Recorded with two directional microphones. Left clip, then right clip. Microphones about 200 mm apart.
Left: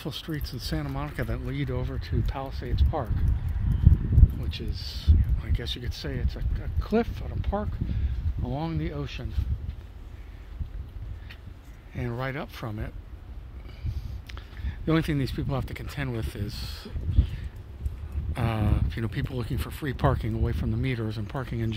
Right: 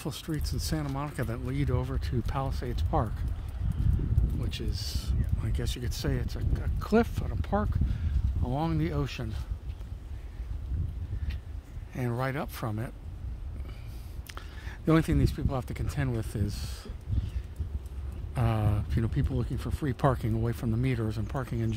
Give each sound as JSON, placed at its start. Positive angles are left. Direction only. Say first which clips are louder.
{"t": 0.0, "sound": "speech", "louder": "left 2 dB", "side_deg": 0}
{"t": 4.5, "sound": "speech", "louder": "even", "side_deg": -15}
{"t": 11.9, "sound": "speech", "louder": "even", "side_deg": -10}
{"t": 14.2, "sound": "a sound", "louder": "right 2 dB", "side_deg": -20}
{"t": 14.9, "sound": "speech", "louder": "even", "side_deg": 0}
{"t": 18.3, "sound": "a sound", "louder": "left 2 dB", "side_deg": 0}
{"t": 19.0, "sound": "speech", "louder": "left 2 dB", "side_deg": 10}
{"t": 20.0, "sound": "speech", "louder": "left 1 dB", "side_deg": -5}